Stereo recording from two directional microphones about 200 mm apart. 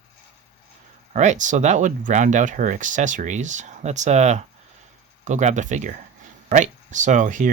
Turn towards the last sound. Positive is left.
turn(degrees=-40)  # may be behind; listen again after turning